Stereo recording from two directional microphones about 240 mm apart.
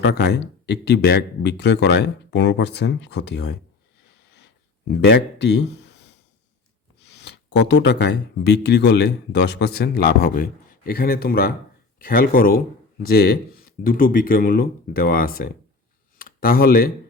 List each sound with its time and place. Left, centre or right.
0.0 s speech: left
4.9 s speech: left
7.1 s speech: left